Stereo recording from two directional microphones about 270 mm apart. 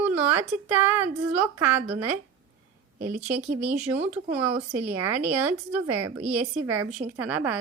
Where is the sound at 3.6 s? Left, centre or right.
Centre.